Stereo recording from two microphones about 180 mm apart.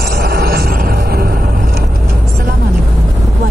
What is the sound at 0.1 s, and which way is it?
Music, 60° right (ahead or behind).